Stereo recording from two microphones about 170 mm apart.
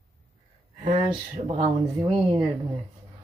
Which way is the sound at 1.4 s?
35° right (ahead or behind).